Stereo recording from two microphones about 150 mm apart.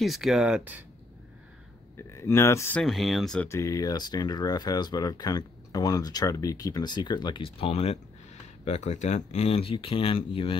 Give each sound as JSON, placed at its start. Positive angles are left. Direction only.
{"t": 0.0, "sound": "speech", "side_deg": 0}
{"t": 2.0, "sound": "speech", "side_deg": 20}
{"t": 2.8, "sound": "speech", "side_deg": 0}
{"t": 3.4, "sound": "speech", "side_deg": 20}